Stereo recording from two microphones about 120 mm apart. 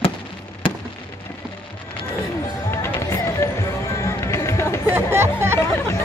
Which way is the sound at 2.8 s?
25° left (ahead or behind).